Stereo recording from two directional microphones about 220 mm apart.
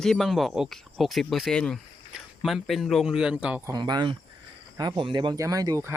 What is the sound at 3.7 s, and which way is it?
Speech, 20° right (ahead or behind).